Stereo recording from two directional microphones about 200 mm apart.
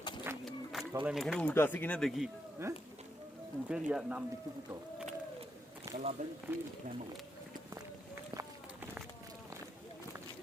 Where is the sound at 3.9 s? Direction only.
5° right (ahead or behind).